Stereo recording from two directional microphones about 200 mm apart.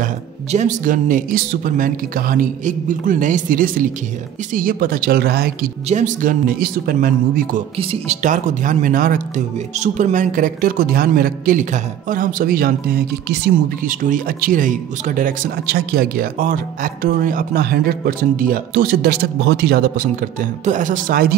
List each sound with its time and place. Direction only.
0.0 s speech: 40° right (ahead or behind)
5.9 s speech: 40° right (ahead or behind)
7.7 s speech: 30° right (ahead or behind); by 13.9 s 55° right (ahead or behind)
14.0 s speech: 45° right (ahead or behind)